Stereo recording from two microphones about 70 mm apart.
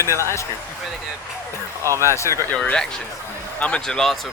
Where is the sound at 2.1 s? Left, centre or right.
Left.